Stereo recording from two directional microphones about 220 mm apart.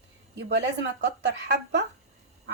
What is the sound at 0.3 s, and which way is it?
Speech, 50° right (ahead or behind).